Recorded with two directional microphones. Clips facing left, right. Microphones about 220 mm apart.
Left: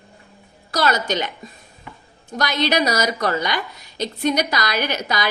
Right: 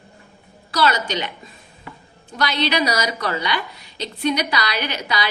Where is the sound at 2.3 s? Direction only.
45° left (ahead or behind).